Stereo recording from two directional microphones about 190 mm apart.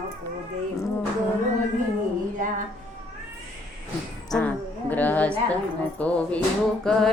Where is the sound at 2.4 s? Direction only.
45° right (ahead or behind).